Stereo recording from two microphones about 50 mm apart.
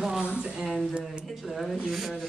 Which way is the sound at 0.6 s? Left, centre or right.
Centre.